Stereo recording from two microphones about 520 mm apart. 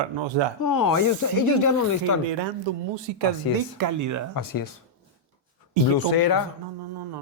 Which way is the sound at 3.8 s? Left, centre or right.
Right.